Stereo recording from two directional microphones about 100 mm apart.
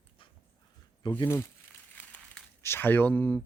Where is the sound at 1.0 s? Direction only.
50° left (ahead or behind).